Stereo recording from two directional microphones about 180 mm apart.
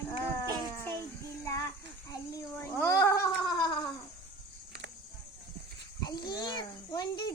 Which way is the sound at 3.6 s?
25° left (ahead or behind).